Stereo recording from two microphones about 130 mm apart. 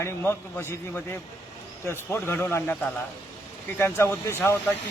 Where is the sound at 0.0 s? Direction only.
20° left (ahead or behind).